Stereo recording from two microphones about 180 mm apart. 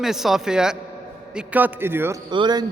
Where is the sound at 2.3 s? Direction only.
25° right (ahead or behind).